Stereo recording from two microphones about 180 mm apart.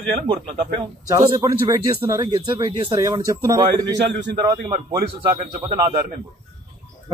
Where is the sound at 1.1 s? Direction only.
20° right (ahead or behind).